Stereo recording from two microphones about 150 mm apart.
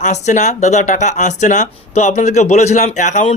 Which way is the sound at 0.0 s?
50° left (ahead or behind).